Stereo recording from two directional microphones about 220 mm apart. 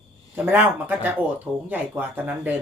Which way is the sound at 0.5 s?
10° right (ahead or behind).